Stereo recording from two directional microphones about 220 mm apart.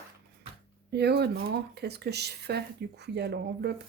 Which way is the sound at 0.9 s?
50° right (ahead or behind).